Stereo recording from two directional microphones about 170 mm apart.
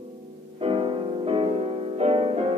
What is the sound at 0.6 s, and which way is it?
Music, 30° right (ahead or behind).